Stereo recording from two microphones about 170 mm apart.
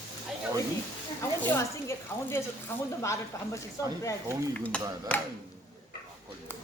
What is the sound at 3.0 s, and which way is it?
Speech, 15° left (ahead or behind).